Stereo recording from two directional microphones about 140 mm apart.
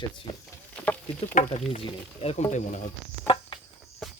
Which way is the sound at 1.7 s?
45° left (ahead or behind).